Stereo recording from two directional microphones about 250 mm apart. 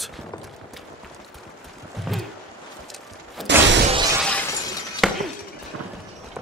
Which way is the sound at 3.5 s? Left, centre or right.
Right.